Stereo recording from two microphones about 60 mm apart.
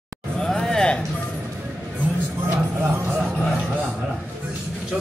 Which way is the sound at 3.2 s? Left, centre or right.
Right.